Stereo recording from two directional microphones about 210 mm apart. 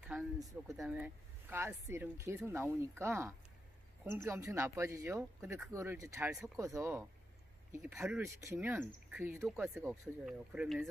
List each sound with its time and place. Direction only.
0.4 s speech: 15° right (ahead or behind)